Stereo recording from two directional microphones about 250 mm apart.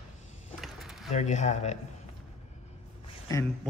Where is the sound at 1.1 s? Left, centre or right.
Left.